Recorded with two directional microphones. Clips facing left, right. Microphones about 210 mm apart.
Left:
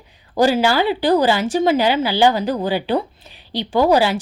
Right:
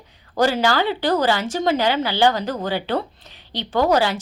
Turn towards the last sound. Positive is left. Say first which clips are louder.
# left 3 dB
turn(degrees=10)  # may be behind; listen again after turning